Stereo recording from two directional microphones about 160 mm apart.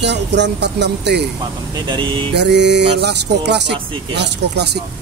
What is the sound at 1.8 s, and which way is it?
Speech, 30° right (ahead or behind).